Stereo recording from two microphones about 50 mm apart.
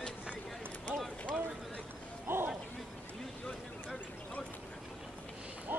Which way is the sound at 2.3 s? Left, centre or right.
Right.